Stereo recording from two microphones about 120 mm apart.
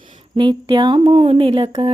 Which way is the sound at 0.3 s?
45° right (ahead or behind).